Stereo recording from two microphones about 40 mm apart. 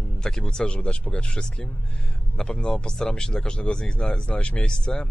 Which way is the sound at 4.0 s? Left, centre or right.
Left.